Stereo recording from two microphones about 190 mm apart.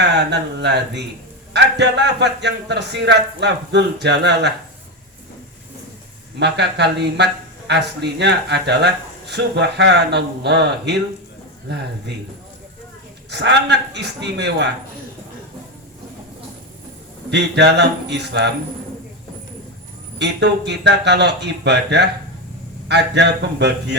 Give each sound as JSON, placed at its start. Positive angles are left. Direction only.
{"t": 0.0, "sound": "speech", "side_deg": -60}
{"t": 6.4, "sound": "speech", "side_deg": -65}
{"t": 13.3, "sound": "speech", "side_deg": -65}
{"t": 17.3, "sound": "speech", "side_deg": -65}
{"t": 20.1, "sound": "speech", "side_deg": -65}